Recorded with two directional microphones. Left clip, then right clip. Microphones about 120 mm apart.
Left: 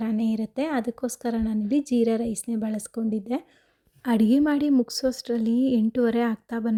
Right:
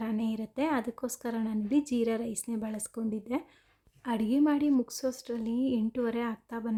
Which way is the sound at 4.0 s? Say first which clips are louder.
Left 6 dB; 50° left (ahead or behind).